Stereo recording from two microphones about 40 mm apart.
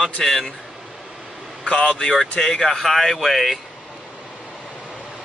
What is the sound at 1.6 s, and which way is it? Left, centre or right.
Speech, left.